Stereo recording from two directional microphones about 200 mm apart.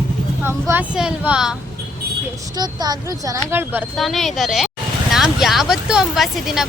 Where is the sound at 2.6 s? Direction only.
20° right (ahead or behind).